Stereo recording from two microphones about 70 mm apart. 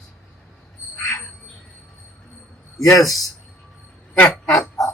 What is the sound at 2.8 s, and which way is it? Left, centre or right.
Speech, left.